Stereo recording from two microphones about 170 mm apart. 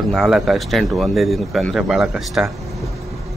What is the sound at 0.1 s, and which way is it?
Speech, centre (ahead or behind).